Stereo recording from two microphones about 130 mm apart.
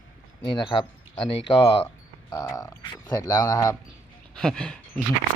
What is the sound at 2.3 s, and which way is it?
Speech, 25° left (ahead or behind).